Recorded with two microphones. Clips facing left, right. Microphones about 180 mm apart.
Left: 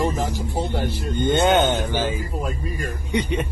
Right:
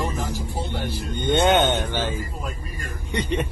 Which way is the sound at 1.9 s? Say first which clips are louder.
Left 3 dB; 15° left (ahead or behind).